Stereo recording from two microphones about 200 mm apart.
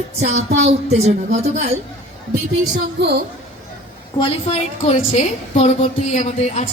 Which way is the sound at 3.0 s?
55° right (ahead or behind).